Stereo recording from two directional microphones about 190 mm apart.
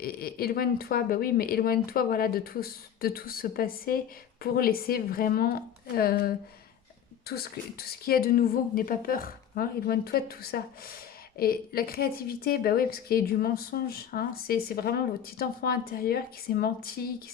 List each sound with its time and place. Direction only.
0.0 s a woman's voice: 50° left (ahead or behind)